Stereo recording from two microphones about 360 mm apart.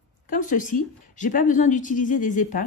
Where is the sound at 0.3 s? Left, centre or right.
Left.